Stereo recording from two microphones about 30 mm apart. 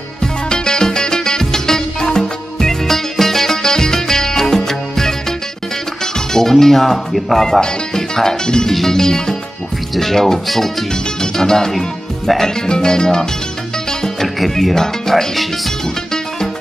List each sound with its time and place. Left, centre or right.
0.2 s music: left
2.9 s music: centre
6.1 s speech: centre
7.6 s music: centre
14.2 s speech: centre